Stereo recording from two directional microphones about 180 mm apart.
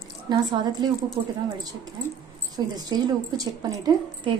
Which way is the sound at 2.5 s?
20° right (ahead or behind).